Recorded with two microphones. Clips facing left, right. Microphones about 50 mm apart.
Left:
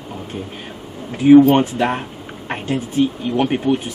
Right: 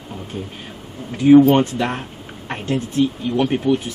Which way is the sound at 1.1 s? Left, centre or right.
Centre.